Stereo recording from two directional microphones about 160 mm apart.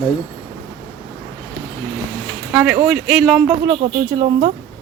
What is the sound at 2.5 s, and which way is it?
Speech, 5° right (ahead or behind).